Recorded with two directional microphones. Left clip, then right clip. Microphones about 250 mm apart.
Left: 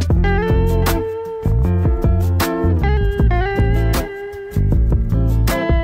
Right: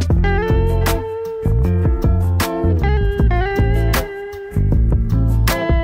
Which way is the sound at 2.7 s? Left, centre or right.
Centre.